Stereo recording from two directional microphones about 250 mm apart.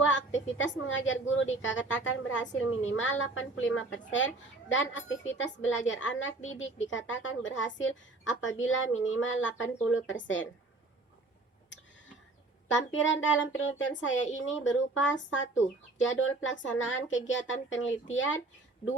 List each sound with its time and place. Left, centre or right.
0.0 s a sound: left
0.5 s speech: left
12.6 s speech: left